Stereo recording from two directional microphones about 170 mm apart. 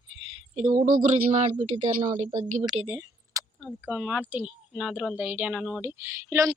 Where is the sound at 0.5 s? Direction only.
50° right (ahead or behind).